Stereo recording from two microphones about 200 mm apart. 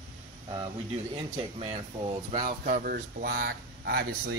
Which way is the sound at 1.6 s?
30° right (ahead or behind).